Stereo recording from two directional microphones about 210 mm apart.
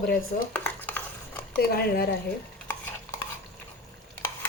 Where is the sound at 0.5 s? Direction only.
10° left (ahead or behind).